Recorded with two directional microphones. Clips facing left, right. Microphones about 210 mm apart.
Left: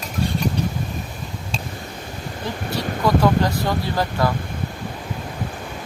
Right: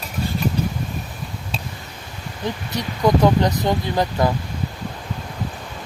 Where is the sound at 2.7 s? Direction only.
20° right (ahead or behind).